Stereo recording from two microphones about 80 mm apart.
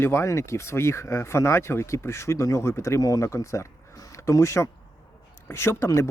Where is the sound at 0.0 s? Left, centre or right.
Left.